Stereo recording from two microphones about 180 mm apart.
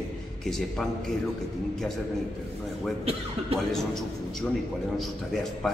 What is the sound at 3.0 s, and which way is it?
Speech, 30° right (ahead or behind).